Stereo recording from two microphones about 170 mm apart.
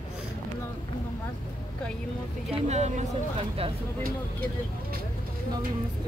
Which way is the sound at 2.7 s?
40° right (ahead or behind).